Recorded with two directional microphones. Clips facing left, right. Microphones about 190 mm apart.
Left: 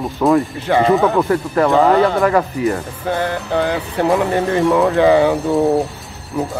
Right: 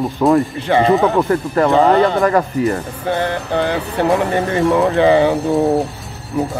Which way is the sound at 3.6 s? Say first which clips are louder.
Even; centre (ahead or behind).